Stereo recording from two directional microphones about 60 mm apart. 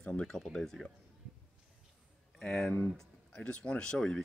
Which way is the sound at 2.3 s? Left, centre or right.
Centre.